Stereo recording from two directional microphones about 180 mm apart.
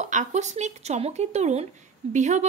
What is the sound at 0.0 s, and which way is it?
A woman's voice, 40° right (ahead or behind).